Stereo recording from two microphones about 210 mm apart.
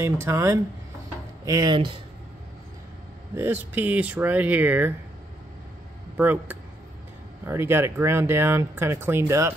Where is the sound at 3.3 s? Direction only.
10° right (ahead or behind).